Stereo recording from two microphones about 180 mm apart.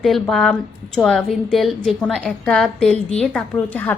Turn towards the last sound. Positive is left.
turn(degrees=10)  # may be behind; listen again after turning